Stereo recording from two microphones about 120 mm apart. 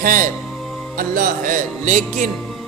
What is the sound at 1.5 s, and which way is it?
Speech, 90° right.